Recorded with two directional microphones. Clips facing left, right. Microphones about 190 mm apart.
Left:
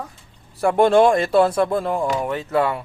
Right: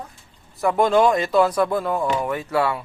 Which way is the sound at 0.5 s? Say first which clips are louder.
Left 3 dB; 30° left (ahead or behind).